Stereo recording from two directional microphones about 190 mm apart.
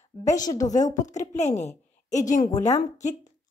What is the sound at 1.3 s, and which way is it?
A woman's voice, 35° left (ahead or behind).